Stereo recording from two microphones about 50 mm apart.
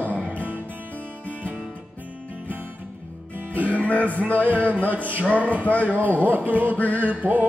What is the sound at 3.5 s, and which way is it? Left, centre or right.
Music, right.